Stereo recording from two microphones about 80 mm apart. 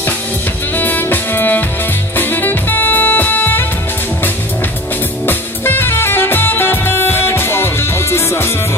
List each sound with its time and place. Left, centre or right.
0.7 s music: left
5.2 s music: left